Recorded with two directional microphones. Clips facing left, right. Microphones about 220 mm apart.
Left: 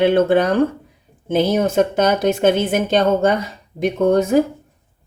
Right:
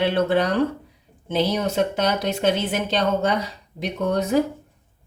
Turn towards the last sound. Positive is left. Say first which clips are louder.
# left 6 dB
turn(degrees=50)  # may be behind; listen again after turning